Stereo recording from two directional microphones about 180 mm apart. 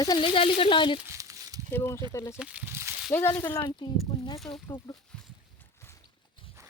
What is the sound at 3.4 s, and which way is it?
Speech, 25° left (ahead or behind).